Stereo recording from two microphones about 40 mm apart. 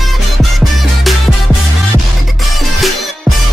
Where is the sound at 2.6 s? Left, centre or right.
Centre.